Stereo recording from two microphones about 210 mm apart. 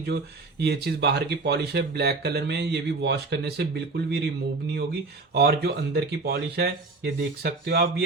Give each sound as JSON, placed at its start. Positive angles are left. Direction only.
{"t": 0.1, "sound": "speech", "side_deg": -55}
{"t": 5.3, "sound": "speech", "side_deg": -50}